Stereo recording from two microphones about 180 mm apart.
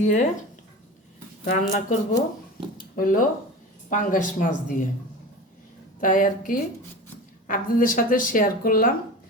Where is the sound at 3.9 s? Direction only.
45° left (ahead or behind).